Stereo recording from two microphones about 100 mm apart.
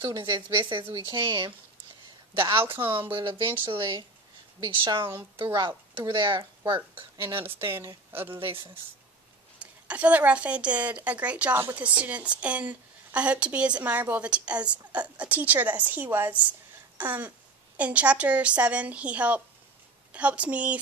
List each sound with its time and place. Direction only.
0.2 s speech: 55° right (ahead or behind)
2.5 s a woman's voice: 25° right (ahead or behind)
3.1 s speech: 50° right (ahead or behind)
7.4 s a woman's voice: 25° right (ahead or behind)
8.4 s speech: 65° right (ahead or behind)
9.6 s a woman's voice: 15° right (ahead or behind)